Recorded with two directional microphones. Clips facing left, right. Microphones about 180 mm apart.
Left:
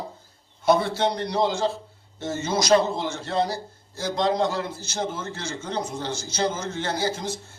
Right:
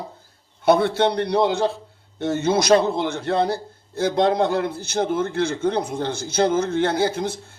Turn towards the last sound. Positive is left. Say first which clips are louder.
# right 5 dB
turn(degrees=-55)  # may be behind; listen again after turning